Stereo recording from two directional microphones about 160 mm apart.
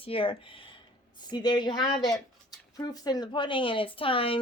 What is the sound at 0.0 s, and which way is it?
A woman's voice, 35° left (ahead or behind).